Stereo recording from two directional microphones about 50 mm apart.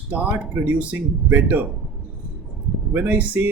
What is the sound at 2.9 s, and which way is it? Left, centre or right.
Speech, right.